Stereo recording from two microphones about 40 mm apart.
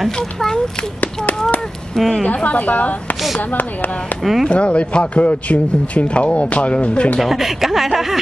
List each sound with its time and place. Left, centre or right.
0.1 s speech: centre
2.0 s speech: centre
2.2 s speech: left
4.2 s speech: centre
4.5 s speech: left
7.2 s speech: centre